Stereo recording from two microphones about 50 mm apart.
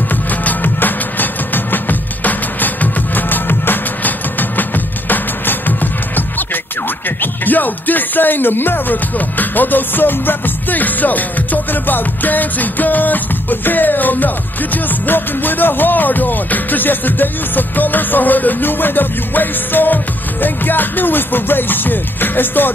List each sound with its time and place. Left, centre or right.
0.1 s music: left
7.2 s speech: left